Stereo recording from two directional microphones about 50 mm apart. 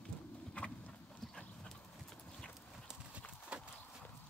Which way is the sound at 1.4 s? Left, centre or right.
Left.